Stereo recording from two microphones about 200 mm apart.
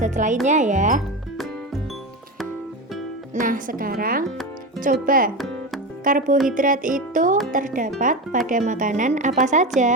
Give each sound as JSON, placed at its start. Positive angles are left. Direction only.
{"t": 0.0, "sound": "a woman's voice", "side_deg": -40}
{"t": 3.3, "sound": "a woman's voice", "side_deg": -40}